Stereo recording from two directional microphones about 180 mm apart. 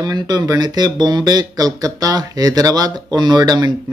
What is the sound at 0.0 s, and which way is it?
Speech, 20° right (ahead or behind).